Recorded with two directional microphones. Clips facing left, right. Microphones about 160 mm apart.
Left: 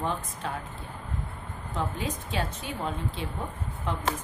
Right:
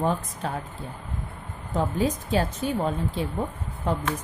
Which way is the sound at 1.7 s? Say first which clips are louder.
Right 7 dB; 40° right (ahead or behind).